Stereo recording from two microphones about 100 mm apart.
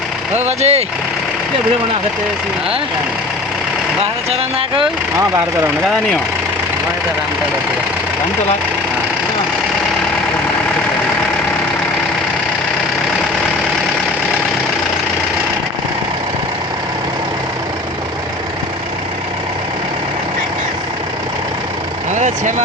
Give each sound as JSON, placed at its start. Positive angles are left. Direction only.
{"t": 0.4, "sound": "speech", "side_deg": -90}
{"t": 4.3, "sound": "speech", "side_deg": -70}